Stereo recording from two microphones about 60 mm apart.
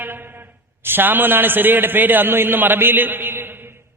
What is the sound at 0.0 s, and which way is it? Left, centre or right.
A man's voice, right.